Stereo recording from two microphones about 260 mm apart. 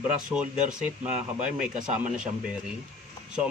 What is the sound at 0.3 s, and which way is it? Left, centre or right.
Speech, centre.